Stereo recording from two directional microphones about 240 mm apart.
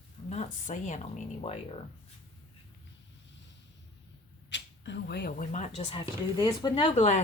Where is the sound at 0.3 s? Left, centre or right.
Left.